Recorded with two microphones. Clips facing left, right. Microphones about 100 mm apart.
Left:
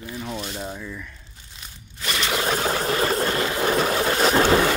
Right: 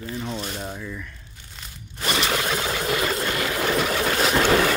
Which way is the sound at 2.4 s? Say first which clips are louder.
Left 2 dB; 30° left (ahead or behind).